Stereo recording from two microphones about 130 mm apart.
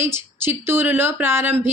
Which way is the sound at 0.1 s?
20° right (ahead or behind).